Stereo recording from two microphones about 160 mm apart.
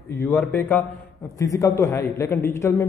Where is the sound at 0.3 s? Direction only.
15° left (ahead or behind).